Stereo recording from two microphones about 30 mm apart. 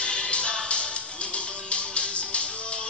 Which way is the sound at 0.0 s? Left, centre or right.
Left.